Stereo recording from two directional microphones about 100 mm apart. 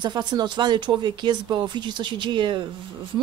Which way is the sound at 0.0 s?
45° right (ahead or behind).